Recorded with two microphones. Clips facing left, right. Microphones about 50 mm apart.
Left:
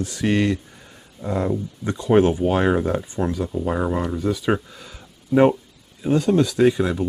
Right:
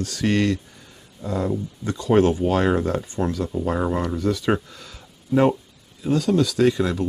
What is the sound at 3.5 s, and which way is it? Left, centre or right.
Speech, centre.